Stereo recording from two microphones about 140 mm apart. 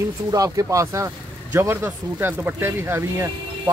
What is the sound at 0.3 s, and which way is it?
Speech, 25° right (ahead or behind).